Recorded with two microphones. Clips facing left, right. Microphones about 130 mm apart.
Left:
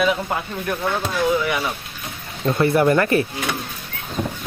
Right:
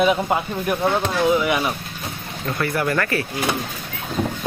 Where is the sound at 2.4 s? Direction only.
25° left (ahead or behind).